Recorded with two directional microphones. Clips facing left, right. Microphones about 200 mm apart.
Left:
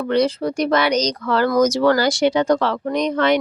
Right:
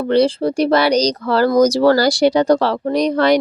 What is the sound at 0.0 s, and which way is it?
Speech, 30° right (ahead or behind).